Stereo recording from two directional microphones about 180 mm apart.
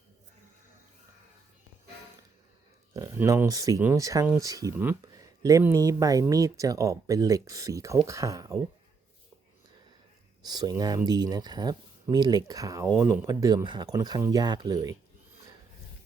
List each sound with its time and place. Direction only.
2.9 s speech: 20° right (ahead or behind)
10.4 s speech: 20° right (ahead or behind)